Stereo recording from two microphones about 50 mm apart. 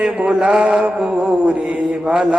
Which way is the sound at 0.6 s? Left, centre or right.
Centre.